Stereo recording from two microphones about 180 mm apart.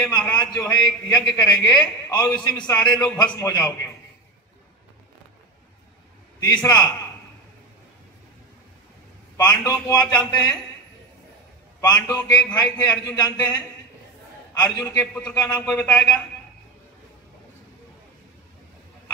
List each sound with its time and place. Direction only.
0.3 s a man's voice: 20° left (ahead or behind)
6.4 s a man's voice: 20° left (ahead or behind)
9.4 s a man's voice: 20° left (ahead or behind)
11.8 s a man's voice: 20° left (ahead or behind)
14.6 s a man's voice: 20° left (ahead or behind)
15.6 s a man's voice: 10° left (ahead or behind)